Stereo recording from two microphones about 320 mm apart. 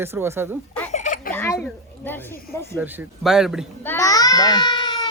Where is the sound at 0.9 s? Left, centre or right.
Left.